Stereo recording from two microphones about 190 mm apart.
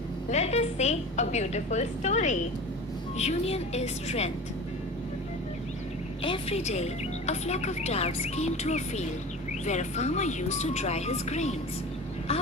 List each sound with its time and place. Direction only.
0.3 s speech: 35° left (ahead or behind)
6.2 s speech: 30° left (ahead or behind)